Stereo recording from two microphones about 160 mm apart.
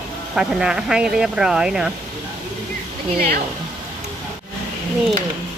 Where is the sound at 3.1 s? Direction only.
70° right (ahead or behind).